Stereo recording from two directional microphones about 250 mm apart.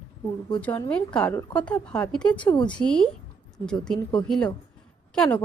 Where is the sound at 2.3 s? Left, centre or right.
Centre.